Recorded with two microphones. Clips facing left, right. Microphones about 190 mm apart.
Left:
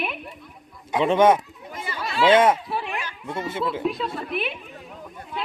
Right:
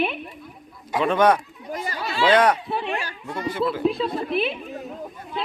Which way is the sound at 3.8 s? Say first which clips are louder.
Right 4 dB; 30° right (ahead or behind).